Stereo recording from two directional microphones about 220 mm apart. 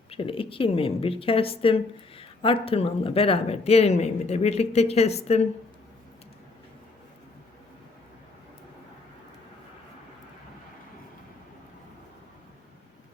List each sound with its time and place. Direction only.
0.1 s a woman's voice: 25° left (ahead or behind)